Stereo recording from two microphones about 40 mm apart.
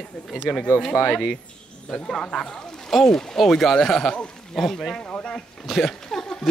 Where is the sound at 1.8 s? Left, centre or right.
Centre.